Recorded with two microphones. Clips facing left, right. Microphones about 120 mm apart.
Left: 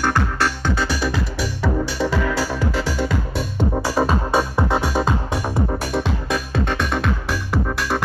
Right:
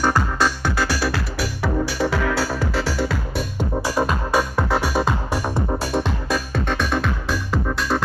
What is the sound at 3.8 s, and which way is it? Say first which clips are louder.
Music: left 1 dB; 30° left (ahead or behind).